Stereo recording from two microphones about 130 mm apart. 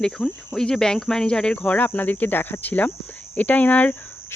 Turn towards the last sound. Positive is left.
turn(degrees=15)  # may be behind; listen again after turning